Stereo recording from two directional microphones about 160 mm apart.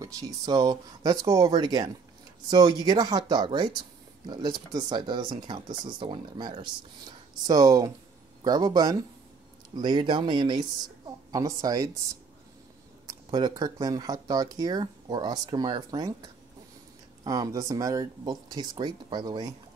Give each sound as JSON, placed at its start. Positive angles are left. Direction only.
{"t": 0.0, "sound": "a woman's voice", "side_deg": -20}
{"t": 13.0, "sound": "speech", "side_deg": -25}